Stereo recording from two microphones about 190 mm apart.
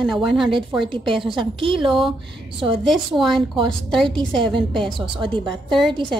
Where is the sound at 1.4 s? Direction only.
25° right (ahead or behind).